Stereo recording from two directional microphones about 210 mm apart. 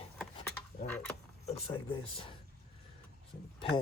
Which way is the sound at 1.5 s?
30° left (ahead or behind).